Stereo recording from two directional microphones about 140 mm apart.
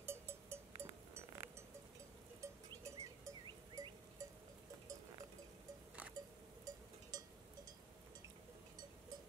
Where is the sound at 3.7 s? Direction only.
25° right (ahead or behind).